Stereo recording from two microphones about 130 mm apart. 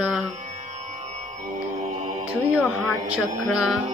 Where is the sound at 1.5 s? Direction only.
70° right (ahead or behind).